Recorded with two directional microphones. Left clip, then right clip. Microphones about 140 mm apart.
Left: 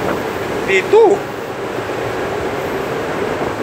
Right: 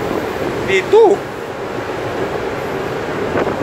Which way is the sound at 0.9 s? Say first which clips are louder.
Right 1 dB; 20° right (ahead or behind).